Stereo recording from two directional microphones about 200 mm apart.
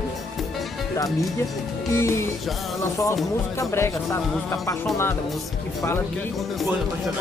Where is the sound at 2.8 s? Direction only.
15° left (ahead or behind).